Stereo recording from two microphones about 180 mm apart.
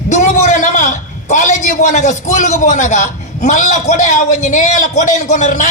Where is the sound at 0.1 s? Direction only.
45° left (ahead or behind).